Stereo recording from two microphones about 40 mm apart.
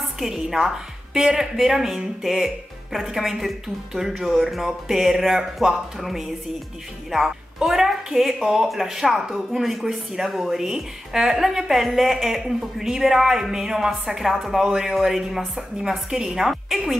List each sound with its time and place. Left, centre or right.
0.3 s a woman's voice: centre
7.6 s a woman's voice: centre